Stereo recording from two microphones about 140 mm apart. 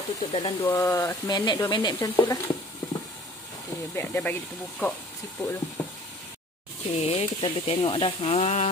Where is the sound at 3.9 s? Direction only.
15° left (ahead or behind).